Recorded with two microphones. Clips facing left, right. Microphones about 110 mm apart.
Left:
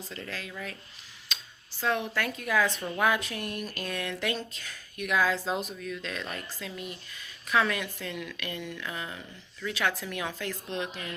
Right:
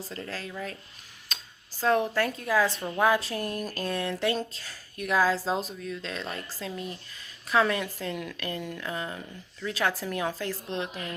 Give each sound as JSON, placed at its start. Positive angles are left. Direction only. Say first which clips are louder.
{"t": 0.0, "sound": "speech", "louder": "right 3 dB", "side_deg": -35}
{"t": 1.3, "sound": "a sound", "louder": "even", "side_deg": -45}
{"t": 1.8, "sound": "speech", "louder": "right 5 dB", "side_deg": -35}